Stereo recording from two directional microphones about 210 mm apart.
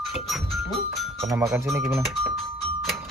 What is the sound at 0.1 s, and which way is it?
Speech, centre (ahead or behind).